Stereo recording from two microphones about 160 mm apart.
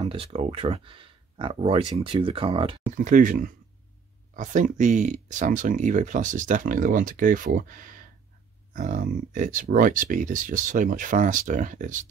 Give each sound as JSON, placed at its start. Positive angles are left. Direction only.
{"t": 0.0, "sound": "speech", "side_deg": -35}
{"t": 3.0, "sound": "speech", "side_deg": -55}